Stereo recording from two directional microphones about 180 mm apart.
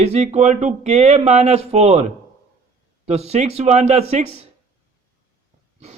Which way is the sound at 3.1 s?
35° right (ahead or behind).